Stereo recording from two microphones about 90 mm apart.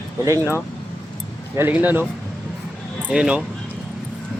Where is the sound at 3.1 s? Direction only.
10° right (ahead or behind).